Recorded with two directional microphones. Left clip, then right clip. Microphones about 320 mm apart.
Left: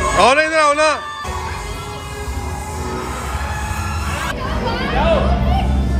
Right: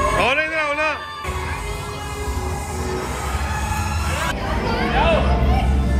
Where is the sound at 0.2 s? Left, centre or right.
Centre.